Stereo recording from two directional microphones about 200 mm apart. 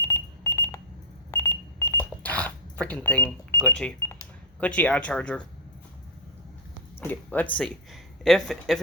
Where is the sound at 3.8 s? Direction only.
5° left (ahead or behind).